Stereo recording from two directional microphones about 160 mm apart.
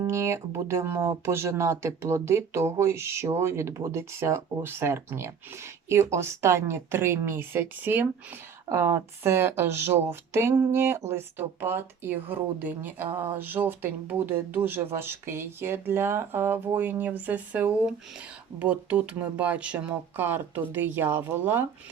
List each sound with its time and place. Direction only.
0.1 s speech: 15° right (ahead or behind)